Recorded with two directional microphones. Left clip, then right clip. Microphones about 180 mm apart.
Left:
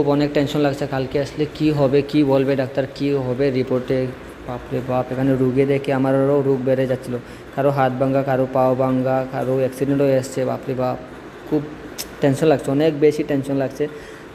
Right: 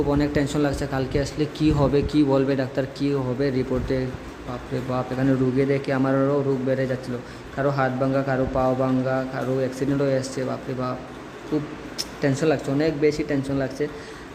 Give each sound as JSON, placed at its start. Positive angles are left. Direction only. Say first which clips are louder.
{"t": 0.0, "sound": "a man's voice", "louder": "left 5 dB", "side_deg": 10}
{"t": 12.4, "sound": "speech", "louder": "left 5 dB", "side_deg": 20}